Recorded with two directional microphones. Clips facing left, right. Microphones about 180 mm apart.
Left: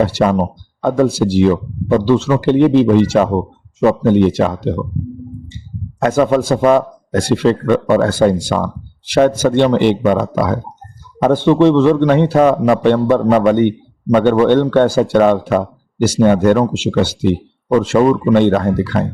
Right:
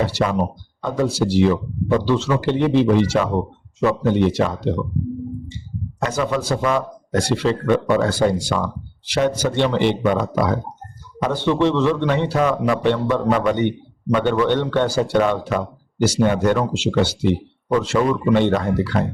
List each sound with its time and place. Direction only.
0.0 s a man's voice: 50° left (ahead or behind)
6.0 s a man's voice: 50° left (ahead or behind)